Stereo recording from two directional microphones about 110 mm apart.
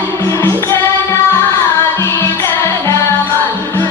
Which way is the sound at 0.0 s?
20° left (ahead or behind).